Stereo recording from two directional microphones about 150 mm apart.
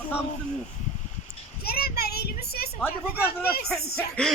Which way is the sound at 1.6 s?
90° left.